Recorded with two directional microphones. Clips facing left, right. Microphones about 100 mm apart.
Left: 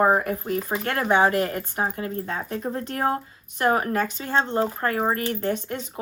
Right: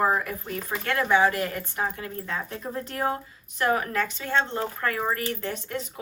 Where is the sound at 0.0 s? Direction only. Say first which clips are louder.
Left 4 dB; 45° left (ahead or behind).